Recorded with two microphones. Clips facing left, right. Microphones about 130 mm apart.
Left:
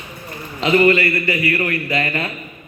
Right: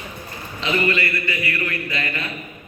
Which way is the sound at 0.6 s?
35° left (ahead or behind).